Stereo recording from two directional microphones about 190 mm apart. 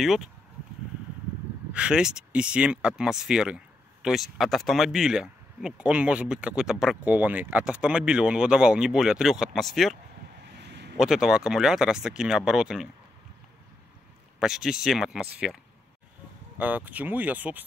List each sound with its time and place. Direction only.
0.0 s speech: centre (ahead or behind)
1.7 s speech: 5° right (ahead or behind)
10.5 s a sound: 65° right (ahead or behind)
11.0 s speech: centre (ahead or behind)
14.4 s speech: 5° right (ahead or behind)